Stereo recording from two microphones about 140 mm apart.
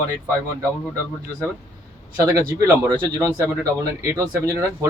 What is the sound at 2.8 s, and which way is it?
Speech, 25° right (ahead or behind).